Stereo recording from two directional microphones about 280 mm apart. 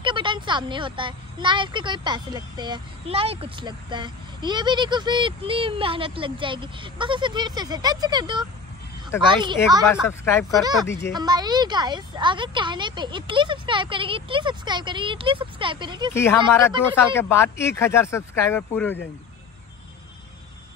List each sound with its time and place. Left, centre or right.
0.0 s a woman's voice: centre
10.0 s speech: centre
10.6 s a woman's voice: centre
16.1 s speech: centre